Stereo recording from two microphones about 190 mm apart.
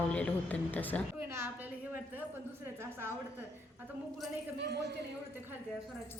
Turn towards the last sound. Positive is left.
turn(degrees=-60)  # may be behind; listen again after turning